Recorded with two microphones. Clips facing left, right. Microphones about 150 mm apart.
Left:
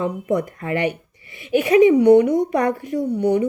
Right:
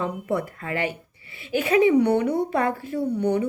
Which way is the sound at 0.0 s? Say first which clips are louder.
Left 4 dB; 15° left (ahead or behind).